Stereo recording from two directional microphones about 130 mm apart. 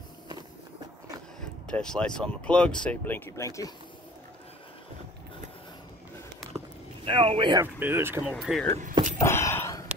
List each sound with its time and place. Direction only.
1.7 s speech: 5° left (ahead or behind); by 3.7 s 25° left (ahead or behind)
7.1 s speech: 40° right (ahead or behind)
7.6 s speech: 15° right (ahead or behind)
8.2 s speech: centre (ahead or behind)
9.2 s a sound: 20° left (ahead or behind)